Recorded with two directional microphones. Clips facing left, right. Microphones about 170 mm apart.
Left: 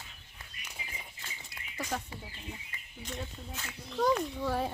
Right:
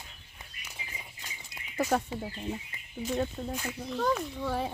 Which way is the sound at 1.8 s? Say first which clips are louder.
Right 9 dB; 50° right (ahead or behind).